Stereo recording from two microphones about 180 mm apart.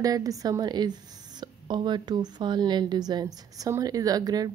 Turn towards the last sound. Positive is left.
turn(degrees=-20)  # may be behind; listen again after turning